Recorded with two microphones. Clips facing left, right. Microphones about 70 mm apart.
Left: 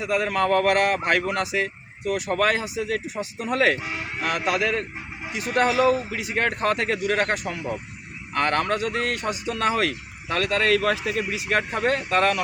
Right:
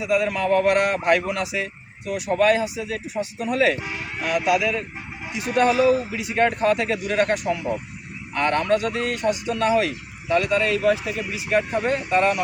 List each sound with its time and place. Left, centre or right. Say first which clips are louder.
0.0 s speech: right 3 dB; left
0.3 s a man's voice: left 1 dB; left
8.4 s a man's voice: right 2 dB; left